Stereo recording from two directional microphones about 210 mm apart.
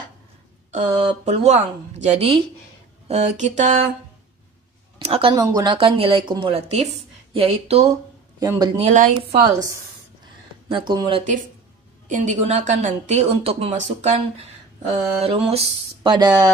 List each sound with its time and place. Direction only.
0.9 s speech: 30° right (ahead or behind)
4.9 s speech: 25° right (ahead or behind)
8.4 s speech: 20° right (ahead or behind)
8.8 s speech: 35° right (ahead or behind)
10.7 s speech: 20° right (ahead or behind)